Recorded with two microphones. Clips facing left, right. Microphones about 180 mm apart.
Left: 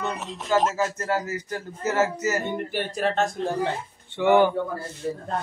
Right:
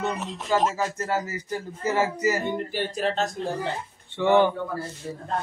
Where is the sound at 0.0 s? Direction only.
Centre (ahead or behind).